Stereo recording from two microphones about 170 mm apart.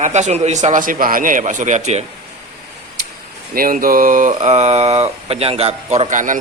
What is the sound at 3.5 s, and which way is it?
Speech, 55° right (ahead or behind).